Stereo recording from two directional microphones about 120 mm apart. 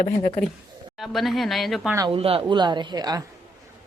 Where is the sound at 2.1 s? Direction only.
50° right (ahead or behind); by 3.2 s 30° right (ahead or behind).